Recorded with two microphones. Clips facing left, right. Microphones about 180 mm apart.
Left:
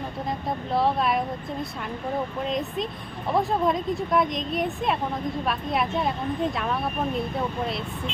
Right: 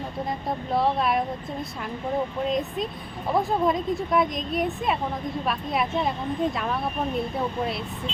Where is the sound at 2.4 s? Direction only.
Centre (ahead or behind).